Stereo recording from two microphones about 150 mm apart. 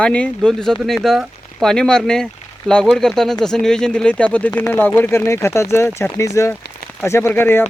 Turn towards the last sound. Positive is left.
turn(degrees=15)  # may be behind; listen again after turning